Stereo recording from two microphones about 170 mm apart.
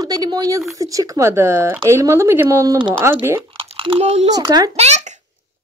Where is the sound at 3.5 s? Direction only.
30° right (ahead or behind).